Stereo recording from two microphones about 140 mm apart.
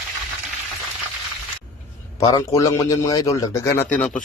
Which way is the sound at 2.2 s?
25° left (ahead or behind).